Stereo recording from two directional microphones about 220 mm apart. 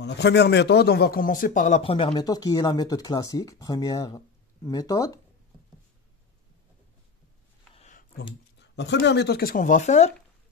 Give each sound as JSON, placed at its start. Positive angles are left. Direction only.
{"t": 0.0, "sound": "a man's voice", "side_deg": 50}
{"t": 7.7, "sound": "a sound", "side_deg": 30}
{"t": 8.5, "sound": "a man's voice", "side_deg": 50}